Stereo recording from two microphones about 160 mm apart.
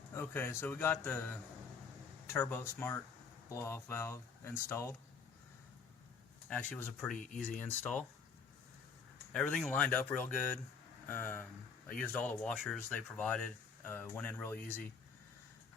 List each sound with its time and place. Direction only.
0.1 s speech: 15° left (ahead or behind)
6.5 s speech: 10° left (ahead or behind)
9.3 s speech: 5° left (ahead or behind)